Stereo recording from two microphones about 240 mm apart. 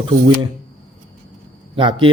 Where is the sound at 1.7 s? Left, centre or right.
Right.